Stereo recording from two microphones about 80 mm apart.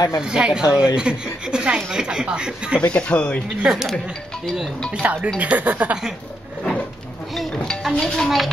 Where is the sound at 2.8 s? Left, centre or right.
Centre.